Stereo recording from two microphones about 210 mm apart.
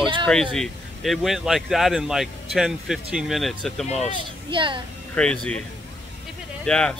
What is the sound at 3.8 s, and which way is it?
Speech, 30° left (ahead or behind).